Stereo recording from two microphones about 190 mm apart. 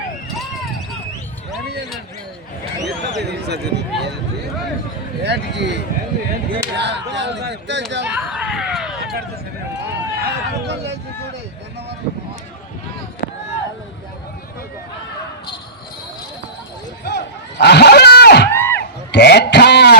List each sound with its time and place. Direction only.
3.2 s speech: 60° right (ahead or behind)
5.2 s speech: 65° right (ahead or behind)
6.7 s speech: 65° right (ahead or behind)
8.0 s a sound: 5° right (ahead or behind)
17.0 s a sound: 60° left (ahead or behind)
18.5 s crowd: 10° left (ahead or behind)
19.1 s speech: 60° left (ahead or behind)